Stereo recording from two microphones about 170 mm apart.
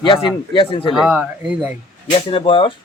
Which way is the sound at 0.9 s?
5° right (ahead or behind).